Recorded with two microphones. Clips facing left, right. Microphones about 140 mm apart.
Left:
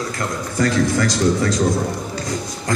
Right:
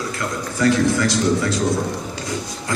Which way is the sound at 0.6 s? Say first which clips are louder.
Right 1 dB; 40° left (ahead or behind).